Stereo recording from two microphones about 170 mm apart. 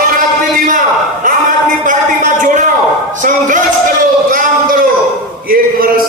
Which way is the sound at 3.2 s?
50° right (ahead or behind).